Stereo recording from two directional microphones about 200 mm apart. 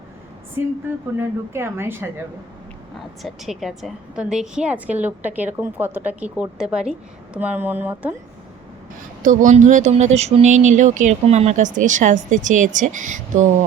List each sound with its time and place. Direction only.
0.9 s a woman's voice: 10° right (ahead or behind)
3.2 s a woman's voice: centre (ahead or behind)
9.2 s speech: 40° right (ahead or behind)